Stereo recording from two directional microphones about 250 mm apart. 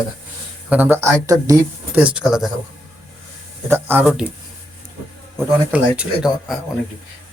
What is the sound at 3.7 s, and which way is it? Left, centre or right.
Speech, centre.